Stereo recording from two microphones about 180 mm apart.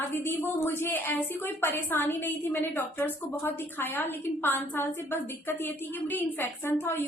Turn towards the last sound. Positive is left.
turn(degrees=15)  # may be behind; listen again after turning